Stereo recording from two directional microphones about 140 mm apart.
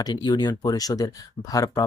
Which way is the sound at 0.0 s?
30° left (ahead or behind).